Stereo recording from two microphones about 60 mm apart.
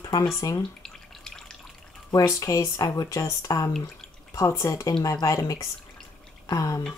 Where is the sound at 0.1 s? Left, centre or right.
Left.